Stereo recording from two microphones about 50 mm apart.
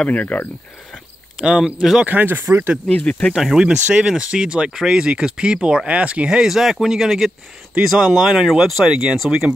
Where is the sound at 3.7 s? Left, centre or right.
Right.